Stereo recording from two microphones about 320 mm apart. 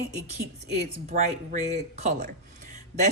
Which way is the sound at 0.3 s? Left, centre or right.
Right.